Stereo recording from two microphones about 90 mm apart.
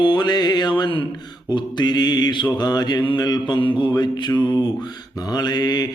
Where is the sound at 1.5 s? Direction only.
55° left (ahead or behind).